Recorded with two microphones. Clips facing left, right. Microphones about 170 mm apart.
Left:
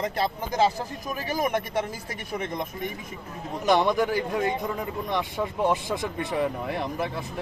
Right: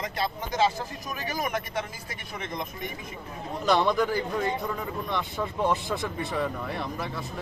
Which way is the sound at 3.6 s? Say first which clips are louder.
Left 2 dB; 20° left (ahead or behind).